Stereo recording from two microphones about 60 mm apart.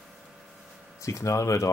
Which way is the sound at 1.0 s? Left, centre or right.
Left.